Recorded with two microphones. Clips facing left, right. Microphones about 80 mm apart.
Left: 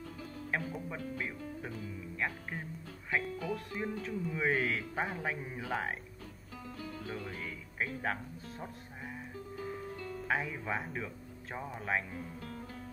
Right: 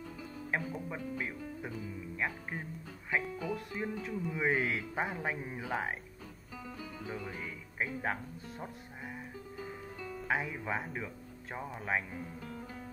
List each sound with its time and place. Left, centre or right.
0.2 s music: centre
4.2 s speech: centre
9.6 s music: centre
11.5 s speech: centre
12.4 s music: centre